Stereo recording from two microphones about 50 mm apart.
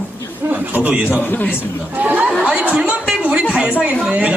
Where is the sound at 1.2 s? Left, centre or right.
Left.